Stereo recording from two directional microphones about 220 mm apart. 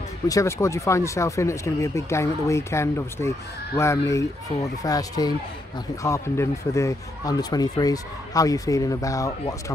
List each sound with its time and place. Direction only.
0.3 s speech: 15° left (ahead or behind)